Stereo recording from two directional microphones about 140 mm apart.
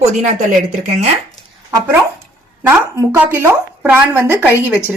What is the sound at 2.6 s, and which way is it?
Speech, 15° right (ahead or behind).